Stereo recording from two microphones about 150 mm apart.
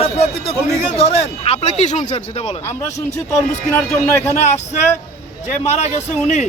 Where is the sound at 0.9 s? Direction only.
45° left (ahead or behind).